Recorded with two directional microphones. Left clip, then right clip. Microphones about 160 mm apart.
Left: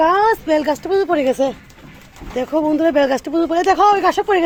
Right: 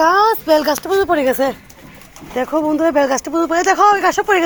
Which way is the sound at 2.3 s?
15° left (ahead or behind).